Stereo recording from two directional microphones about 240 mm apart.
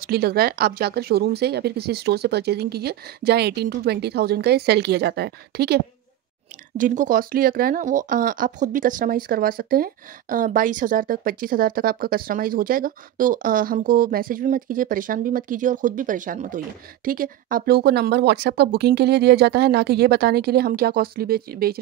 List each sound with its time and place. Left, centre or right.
0.0 s speech: right
6.8 s speech: right